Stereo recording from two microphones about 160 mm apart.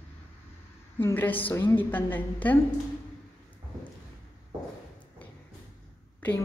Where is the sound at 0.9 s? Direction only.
10° left (ahead or behind).